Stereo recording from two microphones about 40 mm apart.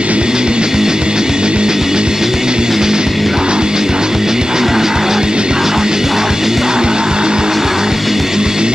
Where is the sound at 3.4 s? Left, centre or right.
Centre.